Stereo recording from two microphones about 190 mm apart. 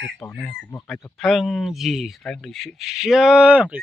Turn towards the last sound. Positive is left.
turn(degrees=-5)  # may be behind; listen again after turning